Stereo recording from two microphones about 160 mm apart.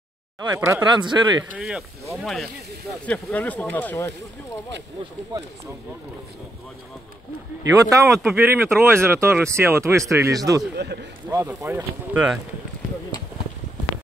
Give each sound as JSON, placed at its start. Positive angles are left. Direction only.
{"t": 0.5, "sound": "speech", "side_deg": -15}
{"t": 0.9, "sound": "speech", "side_deg": -30}
{"t": 1.5, "sound": "speech", "side_deg": -5}
{"t": 5.3, "sound": "speech", "side_deg": -25}
{"t": 7.7, "sound": "speech", "side_deg": -20}
{"t": 8.1, "sound": "speech", "side_deg": 0}
{"t": 8.4, "sound": "speech", "side_deg": -15}
{"t": 10.8, "sound": "speech", "side_deg": -90}
{"t": 11.2, "sound": "speech", "side_deg": -15}